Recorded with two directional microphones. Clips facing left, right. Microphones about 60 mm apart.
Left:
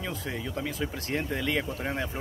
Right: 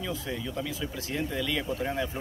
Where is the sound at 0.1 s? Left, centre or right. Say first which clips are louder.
Even; left.